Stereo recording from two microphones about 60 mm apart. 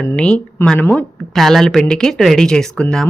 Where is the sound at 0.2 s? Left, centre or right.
Centre.